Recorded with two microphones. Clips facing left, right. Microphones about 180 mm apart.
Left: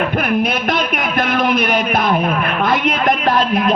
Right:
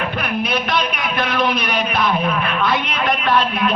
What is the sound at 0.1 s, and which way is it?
Speech, 50° left (ahead or behind).